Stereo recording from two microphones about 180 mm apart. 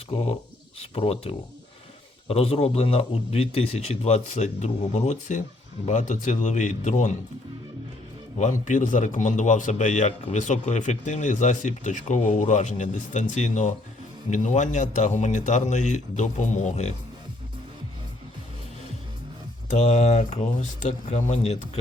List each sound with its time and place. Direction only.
0.1 s a man's voice: 30° left (ahead or behind)
8.4 s a man's voice: 40° left (ahead or behind)
19.7 s a man's voice: 40° left (ahead or behind)